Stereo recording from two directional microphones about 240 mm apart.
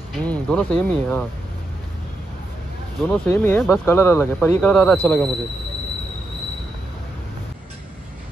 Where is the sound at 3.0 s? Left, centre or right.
Centre.